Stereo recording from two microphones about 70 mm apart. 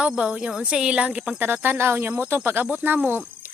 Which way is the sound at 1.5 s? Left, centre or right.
Right.